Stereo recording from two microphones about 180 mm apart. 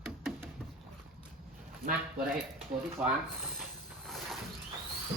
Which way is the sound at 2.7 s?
25° right (ahead or behind).